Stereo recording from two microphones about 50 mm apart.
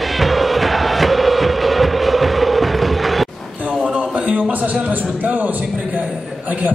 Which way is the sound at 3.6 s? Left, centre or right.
Right.